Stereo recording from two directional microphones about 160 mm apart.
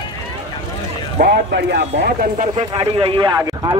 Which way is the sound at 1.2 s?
90° right.